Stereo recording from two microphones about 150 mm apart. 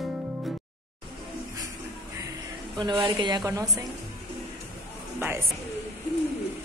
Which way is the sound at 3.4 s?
20° right (ahead or behind).